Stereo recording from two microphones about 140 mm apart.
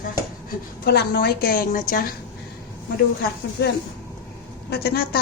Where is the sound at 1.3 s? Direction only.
90° left.